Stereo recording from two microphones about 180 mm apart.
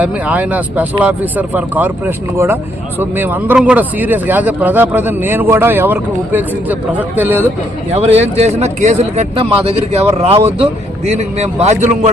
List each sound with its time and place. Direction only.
0.0 s speech: 10° right (ahead or behind)
7.9 s speech: 35° right (ahead or behind)